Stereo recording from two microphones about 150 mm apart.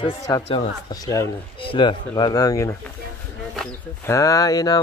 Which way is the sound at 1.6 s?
35° left (ahead or behind).